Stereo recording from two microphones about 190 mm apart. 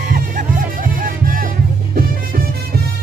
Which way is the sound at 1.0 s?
45° right (ahead or behind).